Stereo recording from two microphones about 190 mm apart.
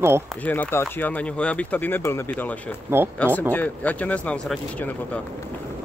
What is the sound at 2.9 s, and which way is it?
Speech, 15° right (ahead or behind).